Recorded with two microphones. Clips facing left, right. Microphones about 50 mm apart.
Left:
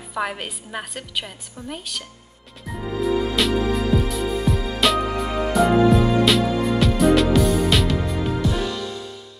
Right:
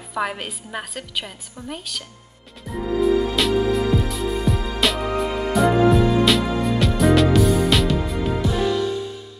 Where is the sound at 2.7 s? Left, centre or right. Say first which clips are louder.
Right 4 dB; centre.